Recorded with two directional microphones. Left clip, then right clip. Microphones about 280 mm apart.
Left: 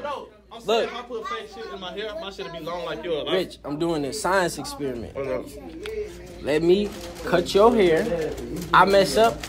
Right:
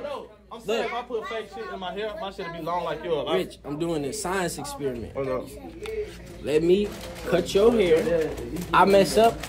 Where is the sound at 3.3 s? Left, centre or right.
Centre.